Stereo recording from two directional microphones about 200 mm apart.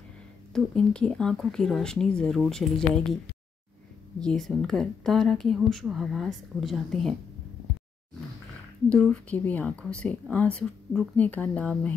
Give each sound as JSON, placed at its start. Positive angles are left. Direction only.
{"t": 0.5, "sound": "a woman's voice", "side_deg": 5}
{"t": 4.2, "sound": "a woman's voice", "side_deg": 5}
{"t": 8.8, "sound": "a woman's voice", "side_deg": 5}